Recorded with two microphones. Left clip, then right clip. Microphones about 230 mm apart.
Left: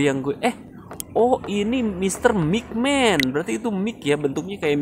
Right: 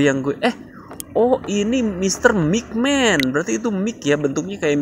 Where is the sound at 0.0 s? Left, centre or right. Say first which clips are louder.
Right 3 dB; centre.